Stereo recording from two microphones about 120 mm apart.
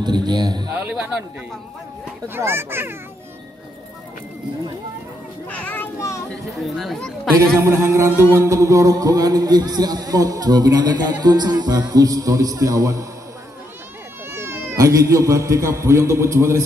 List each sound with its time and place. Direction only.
0.0 s speech: 35° right (ahead or behind)
0.7 s speech: 15° right (ahead or behind)
2.2 s a man's voice: 20° right (ahead or behind)
5.5 s a child's voice: 15° left (ahead or behind)
6.8 s speech: centre (ahead or behind)
7.3 s a man's voice: 25° right (ahead or behind)
8.1 s music: 20° left (ahead or behind)
8.4 s speech: 25° right (ahead or behind)
14.3 s speech: 20° right (ahead or behind)